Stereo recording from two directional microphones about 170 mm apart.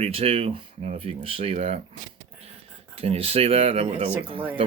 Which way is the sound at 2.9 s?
35° right (ahead or behind).